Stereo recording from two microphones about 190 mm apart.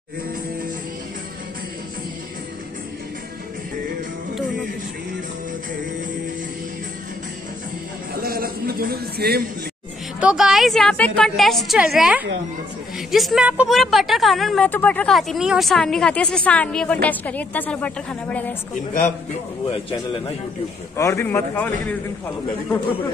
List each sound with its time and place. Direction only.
8.2 s a sound: 50° right (ahead or behind)
10.2 s a woman's voice: centre (ahead or behind)
20.9 s a man's voice: 15° left (ahead or behind)